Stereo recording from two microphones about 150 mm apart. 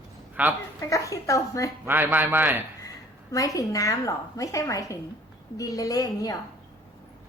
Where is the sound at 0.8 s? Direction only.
20° left (ahead or behind).